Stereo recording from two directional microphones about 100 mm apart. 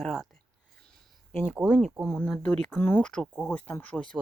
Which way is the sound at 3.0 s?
10° left (ahead or behind).